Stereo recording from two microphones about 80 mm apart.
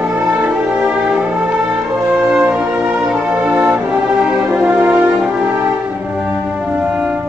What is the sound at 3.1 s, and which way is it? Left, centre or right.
Music, centre.